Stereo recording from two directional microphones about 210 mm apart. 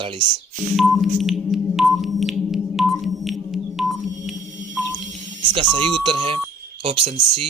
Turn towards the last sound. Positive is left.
turn(degrees=-25)  # may be behind; listen again after turning